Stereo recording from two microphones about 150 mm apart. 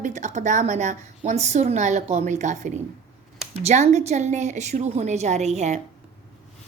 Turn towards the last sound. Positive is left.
turn(degrees=-45)  # may be behind; listen again after turning